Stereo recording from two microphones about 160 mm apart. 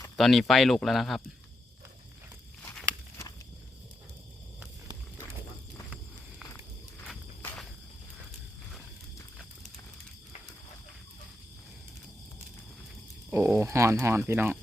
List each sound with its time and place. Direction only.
0.2 s speech: centre (ahead or behind)
2.6 s walk: 10° left (ahead or behind)
7.4 s cricket: 5° left (ahead or behind)
13.3 s speech: 15° right (ahead or behind)